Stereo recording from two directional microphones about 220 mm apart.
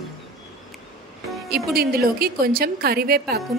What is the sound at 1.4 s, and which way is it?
A woman's voice, 45° right (ahead or behind).